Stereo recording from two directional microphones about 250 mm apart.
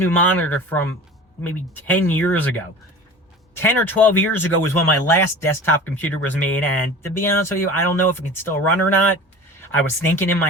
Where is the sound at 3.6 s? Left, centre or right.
Centre.